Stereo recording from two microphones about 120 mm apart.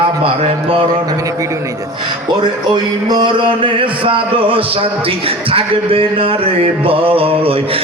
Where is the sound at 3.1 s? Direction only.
45° right (ahead or behind).